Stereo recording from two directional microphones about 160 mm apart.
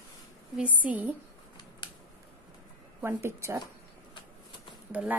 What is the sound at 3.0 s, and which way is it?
Speech, 15° right (ahead or behind).